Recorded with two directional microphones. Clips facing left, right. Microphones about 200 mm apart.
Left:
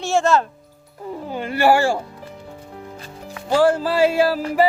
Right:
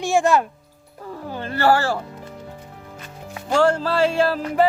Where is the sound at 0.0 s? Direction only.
15° right (ahead or behind).